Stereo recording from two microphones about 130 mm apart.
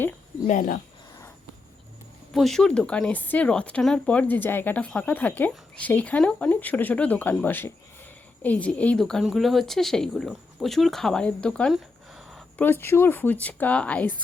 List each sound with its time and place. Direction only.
0.4 s speech: 85° left
2.3 s a woman's voice: centre (ahead or behind)
11.7 s a sound: centre (ahead or behind)
12.5 s speech: 15° left (ahead or behind)